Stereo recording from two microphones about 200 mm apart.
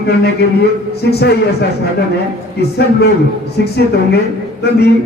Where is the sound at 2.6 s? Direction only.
55° left (ahead or behind).